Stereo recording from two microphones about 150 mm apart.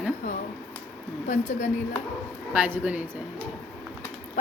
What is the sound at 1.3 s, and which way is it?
Speech, 50° left (ahead or behind).